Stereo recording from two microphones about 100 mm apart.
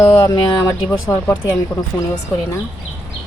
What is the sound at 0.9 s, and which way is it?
Speech, 30° left (ahead or behind).